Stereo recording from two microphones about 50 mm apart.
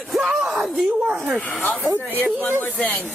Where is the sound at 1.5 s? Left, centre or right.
Left.